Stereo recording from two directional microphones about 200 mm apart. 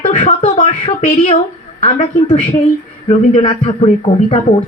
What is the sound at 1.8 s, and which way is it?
Speech, 30° left (ahead or behind).